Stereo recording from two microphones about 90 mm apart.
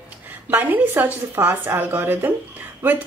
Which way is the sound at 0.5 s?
20° right (ahead or behind).